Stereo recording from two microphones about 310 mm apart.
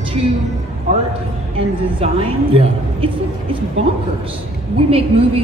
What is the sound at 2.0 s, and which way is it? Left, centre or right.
A woman's voice, centre.